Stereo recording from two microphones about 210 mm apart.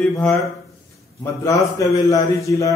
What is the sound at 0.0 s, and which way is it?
Speech, 5° left (ahead or behind).